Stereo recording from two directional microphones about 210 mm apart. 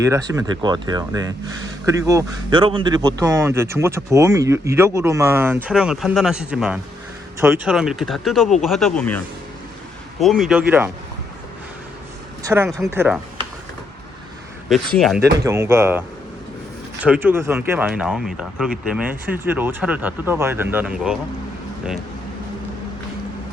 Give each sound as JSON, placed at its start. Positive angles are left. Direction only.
{"t": 0.0, "sound": "speech", "side_deg": -15}
{"t": 12.4, "sound": "speech", "side_deg": -10}
{"t": 14.9, "sound": "speech", "side_deg": 0}
{"t": 15.2, "sound": "speech", "side_deg": -15}